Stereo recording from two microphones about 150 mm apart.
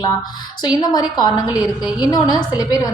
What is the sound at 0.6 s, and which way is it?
A woman's voice, 25° left (ahead or behind).